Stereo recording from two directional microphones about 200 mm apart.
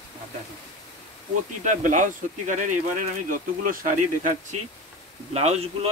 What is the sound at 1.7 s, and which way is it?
Speech, 40° right (ahead or behind).